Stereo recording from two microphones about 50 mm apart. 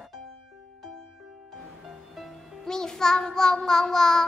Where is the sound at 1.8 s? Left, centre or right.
Centre.